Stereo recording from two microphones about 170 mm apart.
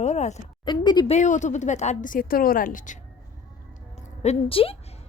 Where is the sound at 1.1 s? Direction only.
45° left (ahead or behind).